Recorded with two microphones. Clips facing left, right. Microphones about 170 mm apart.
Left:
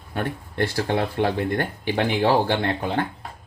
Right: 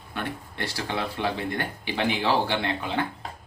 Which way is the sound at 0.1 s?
50° left (ahead or behind).